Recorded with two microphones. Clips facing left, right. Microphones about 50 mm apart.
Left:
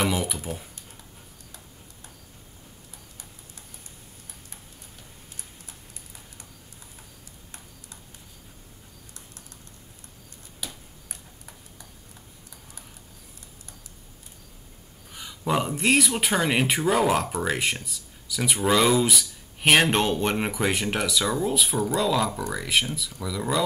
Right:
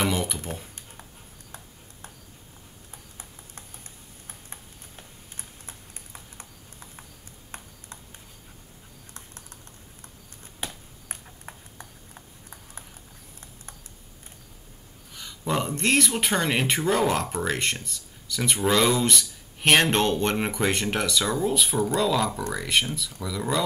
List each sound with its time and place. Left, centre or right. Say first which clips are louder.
0.0 s speech: even; centre
2.9 s clip-clop: right 2 dB; right
4.3 s tick-tock: right 2 dB; right
5.7 s a sound: right 2 dB; right
10.6 s ping: right 3 dB; right
15.1 s speech: left 2 dB; centre